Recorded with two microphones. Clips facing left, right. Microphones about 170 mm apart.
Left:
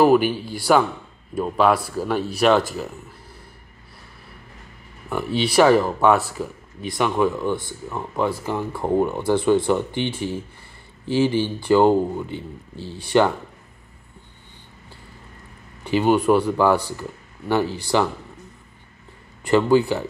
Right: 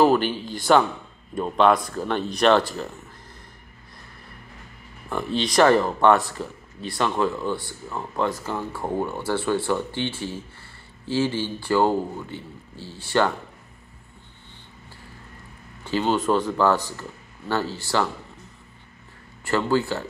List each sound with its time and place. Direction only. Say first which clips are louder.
0.0 s speech: left 3 dB; 10° left (ahead or behind)
5.1 s speech: left 3 dB; 5° left (ahead or behind)
15.8 s speech: left 5 dB; 15° left (ahead or behind)
19.4 s speech: left 6 dB; 15° left (ahead or behind)